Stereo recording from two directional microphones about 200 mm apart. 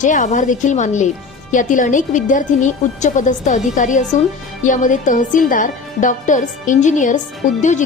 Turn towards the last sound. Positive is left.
turn(degrees=40)  # may be behind; listen again after turning